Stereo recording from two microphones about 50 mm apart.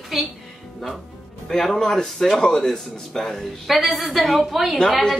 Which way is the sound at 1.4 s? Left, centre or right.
Centre.